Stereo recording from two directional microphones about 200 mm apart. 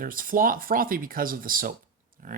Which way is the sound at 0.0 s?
45° right (ahead or behind).